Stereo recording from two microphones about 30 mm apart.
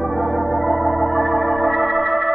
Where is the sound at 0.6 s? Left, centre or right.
Centre.